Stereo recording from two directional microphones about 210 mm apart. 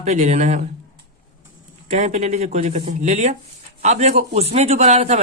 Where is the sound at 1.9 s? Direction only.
35° right (ahead or behind).